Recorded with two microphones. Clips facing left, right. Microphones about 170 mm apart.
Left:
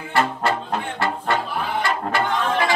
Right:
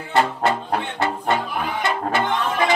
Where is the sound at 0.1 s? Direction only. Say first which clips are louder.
Right 2 dB; 20° right (ahead or behind).